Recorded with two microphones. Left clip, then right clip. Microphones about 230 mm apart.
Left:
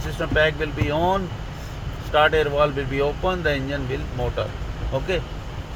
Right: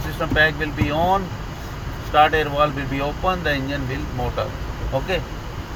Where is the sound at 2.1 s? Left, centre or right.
Left.